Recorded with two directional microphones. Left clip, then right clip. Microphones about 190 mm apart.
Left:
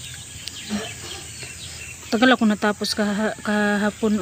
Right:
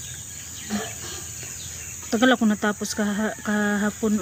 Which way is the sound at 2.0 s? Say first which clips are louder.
Left 2 dB; 35° left (ahead or behind).